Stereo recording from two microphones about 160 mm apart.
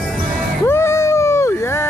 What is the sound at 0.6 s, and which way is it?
Music, 15° left (ahead or behind).